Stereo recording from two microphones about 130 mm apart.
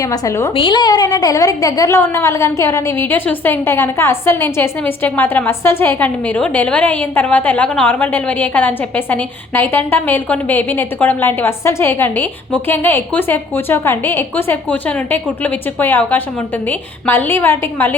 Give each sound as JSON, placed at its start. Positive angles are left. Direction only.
{"t": 0.0, "sound": "a woman's voice", "side_deg": 25}
{"t": 0.5, "sound": "a woman's voice", "side_deg": 40}